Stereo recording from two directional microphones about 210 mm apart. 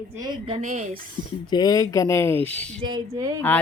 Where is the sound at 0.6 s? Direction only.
40° right (ahead or behind).